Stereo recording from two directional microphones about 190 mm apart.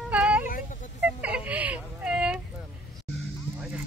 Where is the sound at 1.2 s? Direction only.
5° right (ahead or behind).